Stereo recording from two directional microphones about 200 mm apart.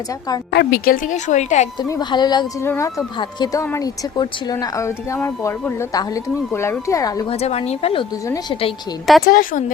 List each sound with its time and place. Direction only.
0.5 s speech: 50° left (ahead or behind); by 1.6 s 35° left (ahead or behind)
1.8 s speech: 20° left (ahead or behind)
7.3 s speech: 30° left (ahead or behind)
9.2 s a woman's voice: 45° left (ahead or behind)